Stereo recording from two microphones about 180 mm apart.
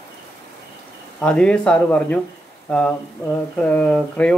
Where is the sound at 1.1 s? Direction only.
5° left (ahead or behind).